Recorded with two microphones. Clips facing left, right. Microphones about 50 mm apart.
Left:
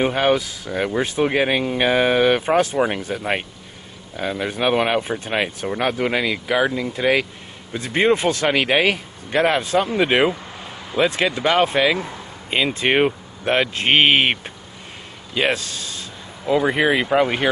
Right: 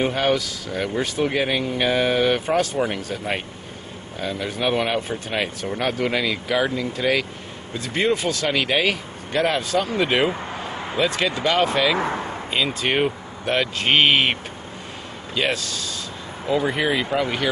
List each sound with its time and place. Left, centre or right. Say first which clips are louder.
0.0 s speech: left 3 dB; centre
10.3 s vehicle: right 5 dB; right
11.0 s speech: left 3 dB; left
12.0 s a sound: right 7 dB; right
12.4 s speech: left 4 dB; left